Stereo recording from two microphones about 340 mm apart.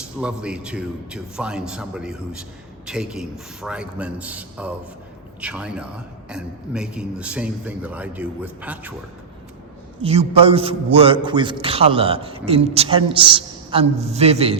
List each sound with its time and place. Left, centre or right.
0.2 s a man's voice: centre
10.0 s a man's voice: centre